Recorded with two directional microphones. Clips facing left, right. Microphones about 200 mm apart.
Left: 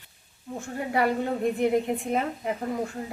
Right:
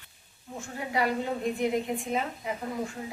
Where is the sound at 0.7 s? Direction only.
55° left (ahead or behind).